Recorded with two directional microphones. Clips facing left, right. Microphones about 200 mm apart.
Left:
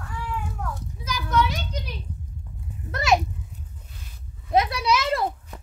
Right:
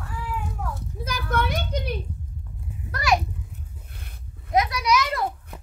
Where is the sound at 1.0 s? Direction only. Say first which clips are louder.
Left 2 dB; 55° right (ahead or behind).